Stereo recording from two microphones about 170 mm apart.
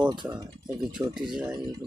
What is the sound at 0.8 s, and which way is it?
Speech, 5° right (ahead or behind).